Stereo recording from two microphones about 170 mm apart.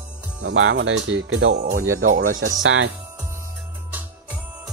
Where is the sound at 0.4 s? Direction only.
90° right.